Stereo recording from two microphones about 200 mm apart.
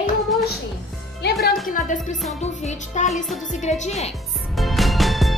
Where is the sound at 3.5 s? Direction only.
35° left (ahead or behind).